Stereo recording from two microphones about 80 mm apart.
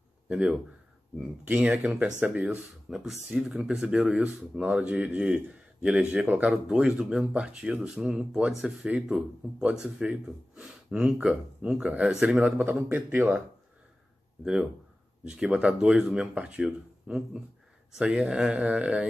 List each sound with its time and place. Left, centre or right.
0.3 s speech: centre
2.9 s speech: centre; by 13.4 s right
14.4 s speech: centre